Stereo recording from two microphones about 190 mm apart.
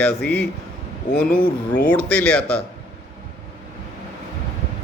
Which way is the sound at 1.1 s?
40° left (ahead or behind).